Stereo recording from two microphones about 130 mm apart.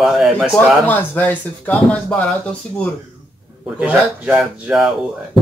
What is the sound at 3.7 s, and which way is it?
Speech, 10° right (ahead or behind).